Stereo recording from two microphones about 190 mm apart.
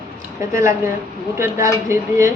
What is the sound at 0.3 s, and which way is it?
A woman's voice, 15° right (ahead or behind).